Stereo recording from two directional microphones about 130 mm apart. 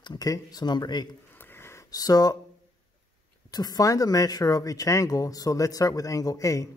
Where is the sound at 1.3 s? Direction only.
15° left (ahead or behind).